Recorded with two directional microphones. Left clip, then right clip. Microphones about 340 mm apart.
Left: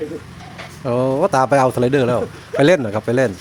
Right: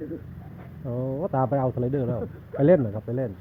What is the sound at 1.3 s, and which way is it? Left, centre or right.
A man's voice, left.